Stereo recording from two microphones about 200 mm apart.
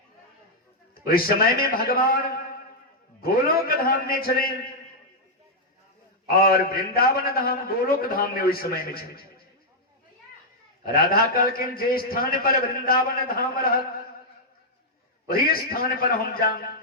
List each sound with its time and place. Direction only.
0.9 s a man's voice: 45° left (ahead or behind)
3.2 s a man's voice: 45° left (ahead or behind)
6.2 s a man's voice: 45° left (ahead or behind)
10.8 s a man's voice: 50° left (ahead or behind)
15.3 s a man's voice: 50° left (ahead or behind)